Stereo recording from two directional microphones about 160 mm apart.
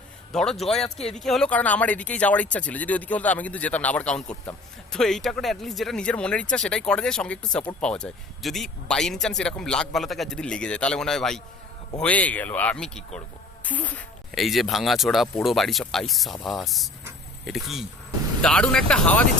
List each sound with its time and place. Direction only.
0.3 s a man's voice: centre (ahead or behind)